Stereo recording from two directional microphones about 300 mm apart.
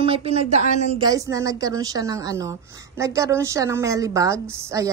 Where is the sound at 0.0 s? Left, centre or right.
Centre.